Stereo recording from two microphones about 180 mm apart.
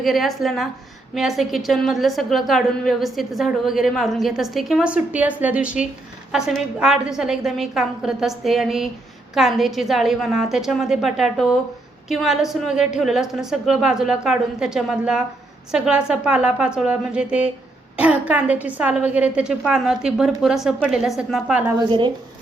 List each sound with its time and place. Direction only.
0.0 s a woman's voice: centre (ahead or behind)
21.8 s speech: 25° right (ahead or behind)